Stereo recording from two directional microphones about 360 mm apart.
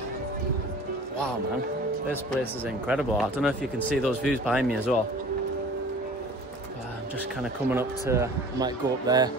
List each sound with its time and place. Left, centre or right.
2.3 s speech: centre
7.7 s speech: centre